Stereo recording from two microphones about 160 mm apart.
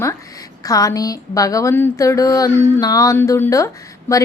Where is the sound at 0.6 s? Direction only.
20° left (ahead or behind).